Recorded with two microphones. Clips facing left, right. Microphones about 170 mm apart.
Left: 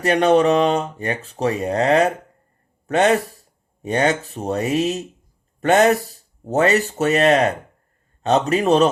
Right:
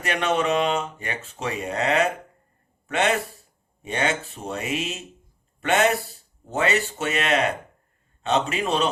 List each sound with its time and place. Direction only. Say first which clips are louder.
0.0 s a man's voice: left 9 dB; 35° left (ahead or behind)